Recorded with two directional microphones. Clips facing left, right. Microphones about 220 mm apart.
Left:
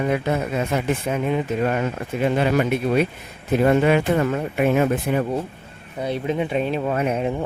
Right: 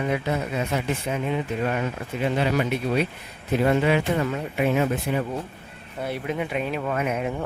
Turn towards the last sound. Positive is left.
turn(degrees=30)  # may be behind; listen again after turning